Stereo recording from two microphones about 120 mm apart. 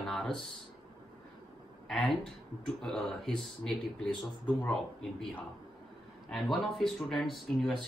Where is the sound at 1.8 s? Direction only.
5° left (ahead or behind).